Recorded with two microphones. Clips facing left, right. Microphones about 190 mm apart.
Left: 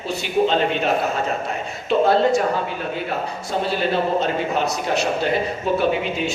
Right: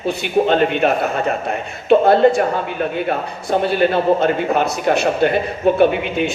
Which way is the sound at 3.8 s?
55° right (ahead or behind).